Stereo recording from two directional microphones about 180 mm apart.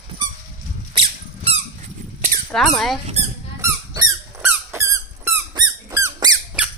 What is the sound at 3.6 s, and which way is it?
Squeak, 20° right (ahead or behind).